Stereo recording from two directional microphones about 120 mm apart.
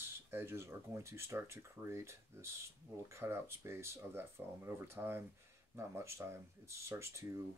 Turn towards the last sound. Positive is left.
turn(degrees=-25)  # may be behind; listen again after turning